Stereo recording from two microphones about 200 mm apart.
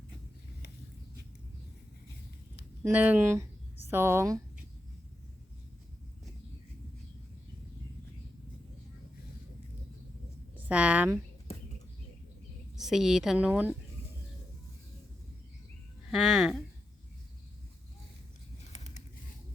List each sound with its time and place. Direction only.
2.8 s speech: 10° right (ahead or behind)
10.7 s speech: 5° right (ahead or behind)
11.5 s a sound: 30° left (ahead or behind)
12.7 s a woman's voice: centre (ahead or behind)
16.1 s a woman's voice: centre (ahead or behind)
18.7 s a sound: 35° left (ahead or behind)